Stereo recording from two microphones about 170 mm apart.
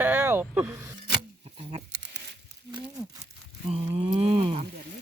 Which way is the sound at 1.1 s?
35° right (ahead or behind).